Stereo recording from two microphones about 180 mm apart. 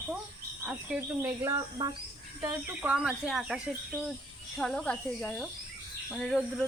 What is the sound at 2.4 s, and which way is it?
Speech, 10° right (ahead or behind).